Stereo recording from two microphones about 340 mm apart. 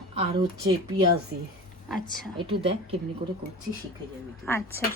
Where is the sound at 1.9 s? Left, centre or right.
Centre.